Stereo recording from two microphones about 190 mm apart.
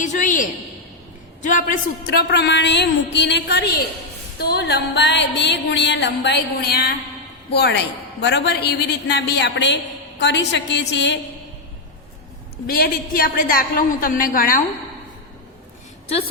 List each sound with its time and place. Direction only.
0.0 s a woman's voice: 40° left (ahead or behind)
2.3 s music: 65° left (ahead or behind)
10.2 s a woman's voice: 65° left (ahead or behind)
12.6 s a woman's voice: 50° left (ahead or behind)